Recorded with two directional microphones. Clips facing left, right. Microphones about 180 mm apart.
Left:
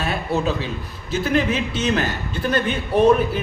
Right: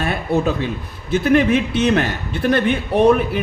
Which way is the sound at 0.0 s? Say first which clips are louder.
Right 3 dB; 55° right (ahead or behind).